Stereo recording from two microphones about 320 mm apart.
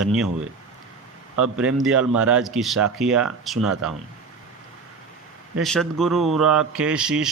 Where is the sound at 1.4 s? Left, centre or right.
Centre.